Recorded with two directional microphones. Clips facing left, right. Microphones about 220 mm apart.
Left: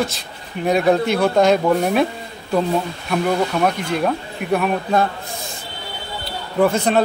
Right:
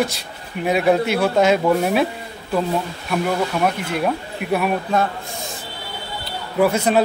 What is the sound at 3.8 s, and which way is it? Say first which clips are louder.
Speech: left 1 dB; 5° right (ahead or behind).